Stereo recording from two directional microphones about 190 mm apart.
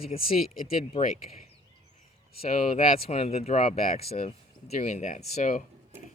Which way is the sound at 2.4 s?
30° left (ahead or behind).